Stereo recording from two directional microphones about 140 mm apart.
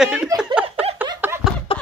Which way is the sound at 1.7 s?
40° left (ahead or behind).